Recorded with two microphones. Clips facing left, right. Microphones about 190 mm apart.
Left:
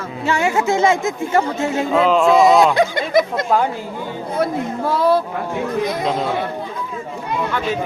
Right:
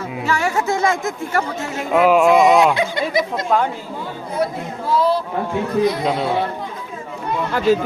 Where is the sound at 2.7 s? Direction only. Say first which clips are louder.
Left 4 dB; 45° left (ahead or behind).